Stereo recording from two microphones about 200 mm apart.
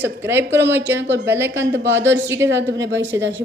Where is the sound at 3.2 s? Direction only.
65° right (ahead or behind).